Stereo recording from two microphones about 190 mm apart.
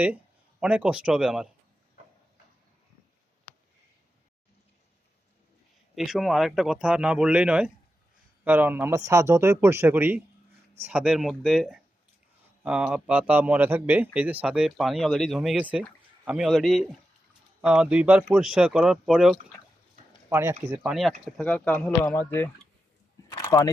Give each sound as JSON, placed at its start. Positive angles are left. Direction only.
{"t": 0.6, "sound": "speech", "side_deg": -5}
{"t": 5.9, "sound": "a man's voice", "side_deg": 0}
{"t": 20.3, "sound": "a man's voice", "side_deg": -15}
{"t": 20.9, "sound": "speech", "side_deg": 0}
{"t": 23.3, "sound": "a sound", "side_deg": 20}